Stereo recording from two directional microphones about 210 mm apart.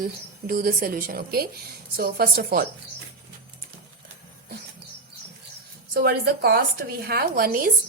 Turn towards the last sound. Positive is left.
turn(degrees=-45)  # may be behind; listen again after turning